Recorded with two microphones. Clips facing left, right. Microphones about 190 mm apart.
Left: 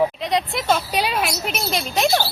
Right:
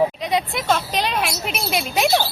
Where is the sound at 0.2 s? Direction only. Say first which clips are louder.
Even; centre (ahead or behind).